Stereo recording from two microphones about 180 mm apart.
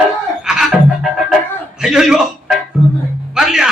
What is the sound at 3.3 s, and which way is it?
Music, 5° right (ahead or behind).